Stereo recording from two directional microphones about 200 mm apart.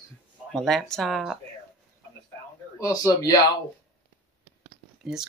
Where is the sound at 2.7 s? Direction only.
15° left (ahead or behind).